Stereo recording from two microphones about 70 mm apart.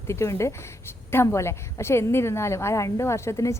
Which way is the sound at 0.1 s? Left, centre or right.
Left.